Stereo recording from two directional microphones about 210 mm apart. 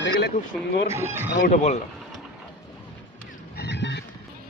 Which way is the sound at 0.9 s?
10° right (ahead or behind).